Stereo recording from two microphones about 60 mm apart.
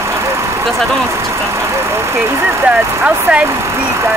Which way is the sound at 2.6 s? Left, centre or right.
Right.